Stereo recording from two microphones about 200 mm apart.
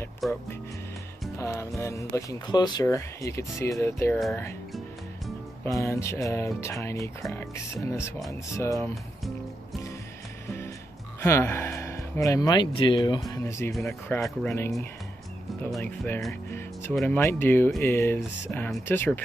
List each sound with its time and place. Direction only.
0.2 s speech: centre (ahead or behind)
1.4 s speech: 15° left (ahead or behind)
5.7 s speech: 15° left (ahead or behind)
11.1 s speech: 15° left (ahead or behind)
15.7 s speech: 5° left (ahead or behind)